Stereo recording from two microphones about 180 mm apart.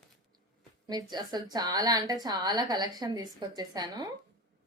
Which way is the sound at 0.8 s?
25° right (ahead or behind).